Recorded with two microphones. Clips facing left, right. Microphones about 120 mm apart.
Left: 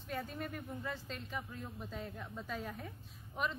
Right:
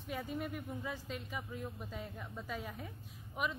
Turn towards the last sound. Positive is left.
turn(degrees=-10)  # may be behind; listen again after turning